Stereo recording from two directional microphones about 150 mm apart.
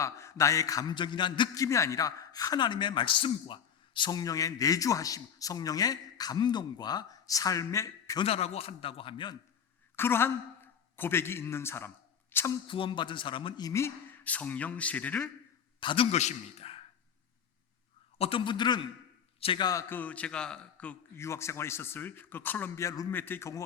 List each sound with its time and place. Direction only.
0.0 s a man's voice: 20° left (ahead or behind)
8.2 s a man's voice: 40° left (ahead or behind)
9.9 s a man's voice: 15° left (ahead or behind)
12.3 s a sound: 15° left (ahead or behind)
12.6 s speech: 35° left (ahead or behind); by 15.3 s 10° left (ahead or behind)
15.8 s a man's voice: 35° left (ahead or behind)
16.1 s a man's voice: 45° left (ahead or behind)
18.2 s a man's voice: 35° left (ahead or behind)
19.9 s speech: 10° left (ahead or behind)
21.2 s speech: 20° left (ahead or behind)